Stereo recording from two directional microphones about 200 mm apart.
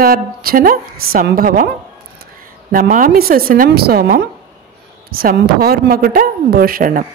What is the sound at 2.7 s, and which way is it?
Speech, 45° right (ahead or behind).